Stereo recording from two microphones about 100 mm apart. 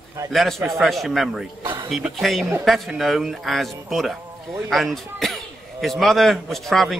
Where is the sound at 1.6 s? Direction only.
55° right (ahead or behind).